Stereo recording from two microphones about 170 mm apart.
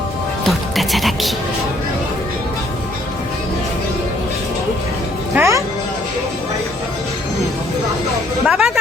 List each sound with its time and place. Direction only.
0.4 s music: centre (ahead or behind)
5.3 s music: 15° right (ahead or behind)
8.4 s music: 5° right (ahead or behind)